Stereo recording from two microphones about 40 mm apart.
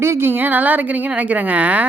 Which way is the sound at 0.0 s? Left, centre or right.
Right.